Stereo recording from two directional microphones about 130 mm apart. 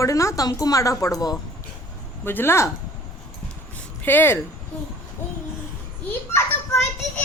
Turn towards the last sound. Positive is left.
turn(degrees=15)  # may be behind; listen again after turning